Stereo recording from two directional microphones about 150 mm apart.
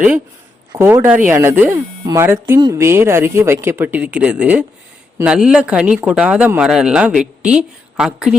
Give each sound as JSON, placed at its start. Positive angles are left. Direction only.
{"t": 1.0, "sound": "speech", "side_deg": -10}